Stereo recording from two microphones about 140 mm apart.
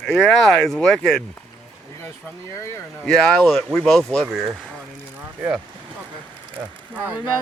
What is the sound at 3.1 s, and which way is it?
Speech, 5° left (ahead or behind).